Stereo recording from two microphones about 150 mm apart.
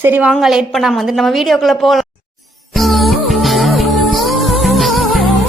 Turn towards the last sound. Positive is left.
turn(degrees=0)  # may be behind; listen again after turning